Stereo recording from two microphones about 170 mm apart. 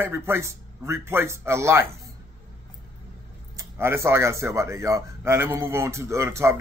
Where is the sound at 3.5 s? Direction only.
15° right (ahead or behind).